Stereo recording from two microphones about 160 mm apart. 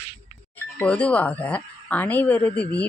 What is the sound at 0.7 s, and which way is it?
A woman's voice, 10° left (ahead or behind).